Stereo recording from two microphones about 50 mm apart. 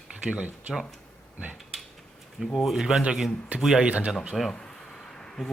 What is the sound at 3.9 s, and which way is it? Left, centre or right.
Speech, right.